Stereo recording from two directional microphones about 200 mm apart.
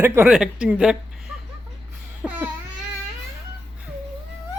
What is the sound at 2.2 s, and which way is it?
Babbling, 5° right (ahead or behind).